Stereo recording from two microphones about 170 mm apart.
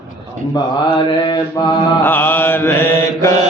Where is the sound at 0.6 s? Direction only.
30° left (ahead or behind).